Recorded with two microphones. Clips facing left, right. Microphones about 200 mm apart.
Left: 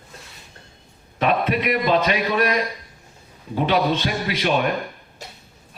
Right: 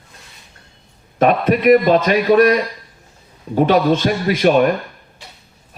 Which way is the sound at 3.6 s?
45° right (ahead or behind).